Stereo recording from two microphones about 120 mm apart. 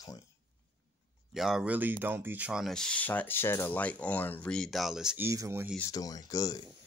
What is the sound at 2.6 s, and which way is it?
Speech, 5° left (ahead or behind).